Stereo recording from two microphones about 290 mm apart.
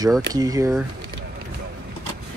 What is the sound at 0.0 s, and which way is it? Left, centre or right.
Speech, centre.